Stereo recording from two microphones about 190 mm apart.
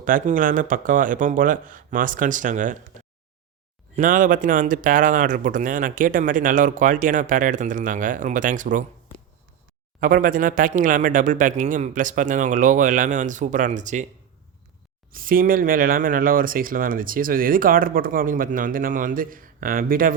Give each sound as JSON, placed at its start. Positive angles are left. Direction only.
{"t": 0.0, "sound": "speech", "side_deg": -45}
{"t": 3.9, "sound": "speech", "side_deg": -45}
{"t": 10.0, "sound": "speech", "side_deg": -45}
{"t": 15.1, "sound": "speech", "side_deg": -50}